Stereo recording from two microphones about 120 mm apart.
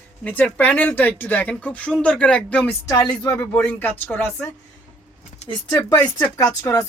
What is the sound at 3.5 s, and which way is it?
Speech, 15° left (ahead or behind).